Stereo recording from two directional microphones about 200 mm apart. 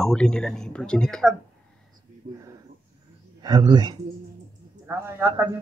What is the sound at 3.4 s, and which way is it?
Speech, 20° right (ahead or behind).